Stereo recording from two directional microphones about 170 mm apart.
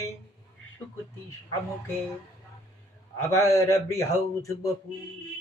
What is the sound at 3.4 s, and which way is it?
Speech, 20° left (ahead or behind).